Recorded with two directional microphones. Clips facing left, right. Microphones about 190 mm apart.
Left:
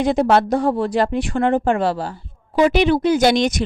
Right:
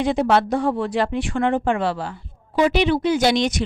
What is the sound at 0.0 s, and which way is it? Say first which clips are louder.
Speech: left 3 dB; 45° left (ahead or behind).